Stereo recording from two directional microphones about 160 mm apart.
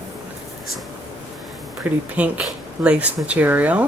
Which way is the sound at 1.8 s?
10° right (ahead or behind).